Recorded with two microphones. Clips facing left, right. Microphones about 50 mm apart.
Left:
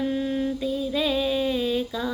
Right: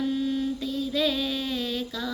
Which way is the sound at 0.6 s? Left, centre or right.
Centre.